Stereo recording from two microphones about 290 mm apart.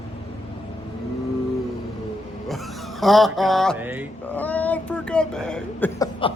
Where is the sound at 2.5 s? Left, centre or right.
Centre.